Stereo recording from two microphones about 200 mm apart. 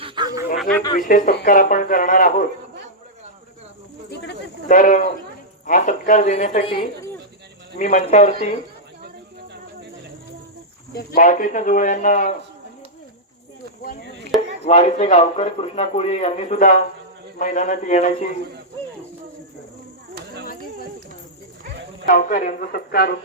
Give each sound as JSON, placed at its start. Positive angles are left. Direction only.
{"t": 0.0, "sound": "a sound", "side_deg": -20}
{"t": 0.9, "sound": "a man's voice", "side_deg": 40}
{"t": 4.7, "sound": "speech", "side_deg": 40}
{"t": 10.9, "sound": "speech", "side_deg": 45}
{"t": 14.6, "sound": "speech", "side_deg": 35}
{"t": 22.0, "sound": "a man's voice", "side_deg": 40}